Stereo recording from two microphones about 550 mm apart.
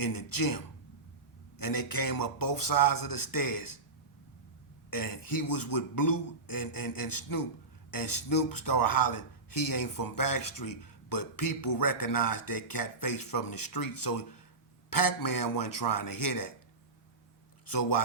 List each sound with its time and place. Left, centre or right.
0.0 s speech: left
4.9 s speech: left
17.7 s speech: left